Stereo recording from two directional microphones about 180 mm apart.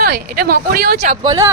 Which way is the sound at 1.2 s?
20° right (ahead or behind).